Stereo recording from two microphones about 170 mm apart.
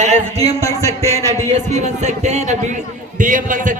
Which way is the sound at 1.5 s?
45° right (ahead or behind).